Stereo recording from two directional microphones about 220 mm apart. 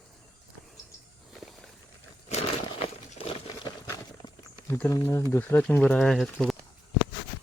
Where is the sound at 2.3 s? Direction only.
30° left (ahead or behind).